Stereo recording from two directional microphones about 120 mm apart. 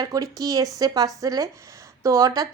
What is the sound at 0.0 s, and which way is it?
A woman's voice, 30° right (ahead or behind).